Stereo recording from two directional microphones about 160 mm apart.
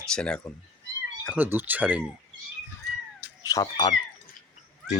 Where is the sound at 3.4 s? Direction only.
25° left (ahead or behind).